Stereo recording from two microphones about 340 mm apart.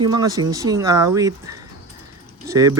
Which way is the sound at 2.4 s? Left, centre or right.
Centre.